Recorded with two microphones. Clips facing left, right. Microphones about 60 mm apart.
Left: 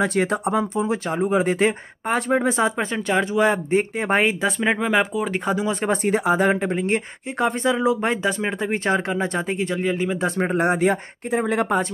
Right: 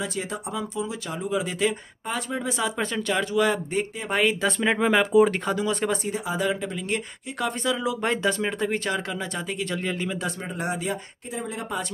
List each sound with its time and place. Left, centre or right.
0.0 s speech: left
2.8 s speech: left
4.4 s speech: centre
6.0 s speech: left
8.0 s speech: centre
9.7 s speech: centre
10.4 s speech: left